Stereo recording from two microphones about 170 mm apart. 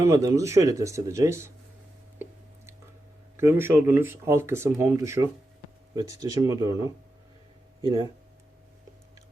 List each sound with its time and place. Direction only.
0.0 s speech: 20° right (ahead or behind)
3.3 s speech: 15° right (ahead or behind)